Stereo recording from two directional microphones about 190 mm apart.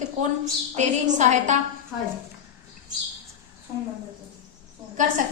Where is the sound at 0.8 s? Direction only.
40° right (ahead or behind).